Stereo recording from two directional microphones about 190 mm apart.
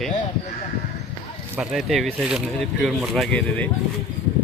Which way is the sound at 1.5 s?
5° right (ahead or behind).